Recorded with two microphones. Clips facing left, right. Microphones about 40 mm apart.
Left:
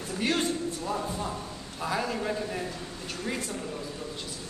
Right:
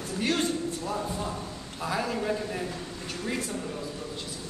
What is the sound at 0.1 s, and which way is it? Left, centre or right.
A man's voice, centre.